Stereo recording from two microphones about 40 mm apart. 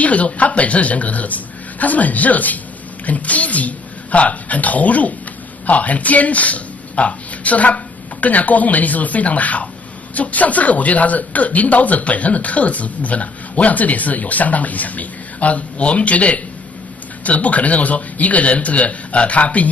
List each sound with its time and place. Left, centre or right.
0.0 s a woman's voice: left